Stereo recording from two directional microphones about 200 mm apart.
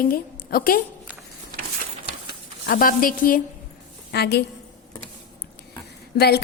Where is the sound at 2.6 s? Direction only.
45° left (ahead or behind).